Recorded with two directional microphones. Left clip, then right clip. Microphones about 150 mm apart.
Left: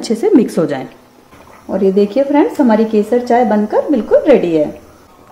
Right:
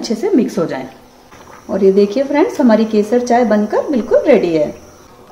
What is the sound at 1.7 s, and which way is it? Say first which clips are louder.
Speech: right 1 dB; 25° left (ahead or behind).